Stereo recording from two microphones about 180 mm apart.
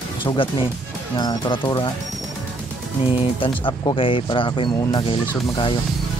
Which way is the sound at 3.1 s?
30° left (ahead or behind).